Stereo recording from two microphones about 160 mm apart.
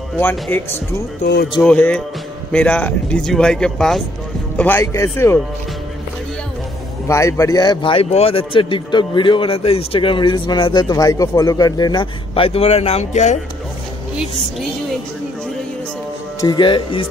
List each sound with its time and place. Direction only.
0.2 s a man's voice: 15° left (ahead or behind)
1.2 s speech: 90° left
1.6 s a man's voice: 5° left (ahead or behind)
7.1 s a man's voice: 20° left (ahead or behind); by 13.4 s 45° left (ahead or behind)
16.3 s speech: 25° left (ahead or behind)